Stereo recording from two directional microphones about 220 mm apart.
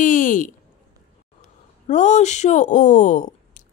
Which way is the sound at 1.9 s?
30° left (ahead or behind).